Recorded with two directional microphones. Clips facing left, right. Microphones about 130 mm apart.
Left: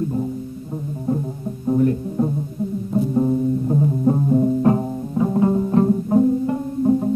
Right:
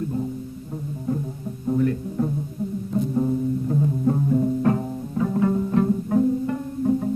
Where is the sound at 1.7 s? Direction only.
30° left (ahead or behind).